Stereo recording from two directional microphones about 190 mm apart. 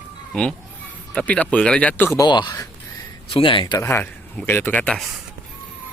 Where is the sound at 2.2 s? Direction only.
25° left (ahead or behind).